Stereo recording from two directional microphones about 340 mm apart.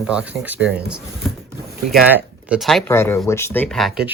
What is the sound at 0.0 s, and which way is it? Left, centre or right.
Speech, centre.